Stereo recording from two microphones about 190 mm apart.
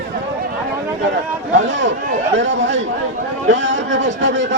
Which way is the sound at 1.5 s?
75° right (ahead or behind).